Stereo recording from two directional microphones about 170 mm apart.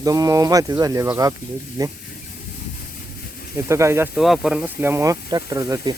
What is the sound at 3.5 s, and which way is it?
Speech, 15° right (ahead or behind).